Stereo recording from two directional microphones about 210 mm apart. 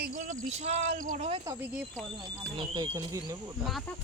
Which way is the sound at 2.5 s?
20° right (ahead or behind).